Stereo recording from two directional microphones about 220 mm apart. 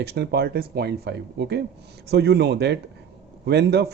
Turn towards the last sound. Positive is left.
turn(degrees=-50)  # may be behind; listen again after turning